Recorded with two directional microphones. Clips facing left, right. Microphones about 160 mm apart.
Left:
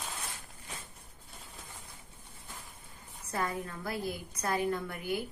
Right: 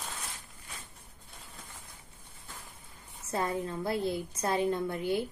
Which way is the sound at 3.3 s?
25° right (ahead or behind).